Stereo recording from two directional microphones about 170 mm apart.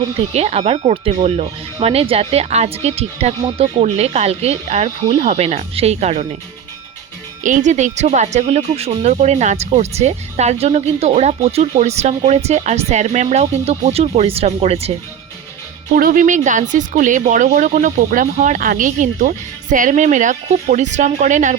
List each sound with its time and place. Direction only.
0.3 s speech: 40° right (ahead or behind)
7.4 s speech: 45° right (ahead or behind)
16.0 s speech: 55° right (ahead or behind)